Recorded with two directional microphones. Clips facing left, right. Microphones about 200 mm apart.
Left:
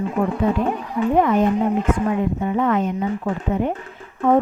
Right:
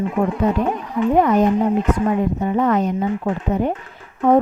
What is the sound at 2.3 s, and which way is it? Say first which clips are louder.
A woman's voice: right 2 dB; 40° right (ahead or behind).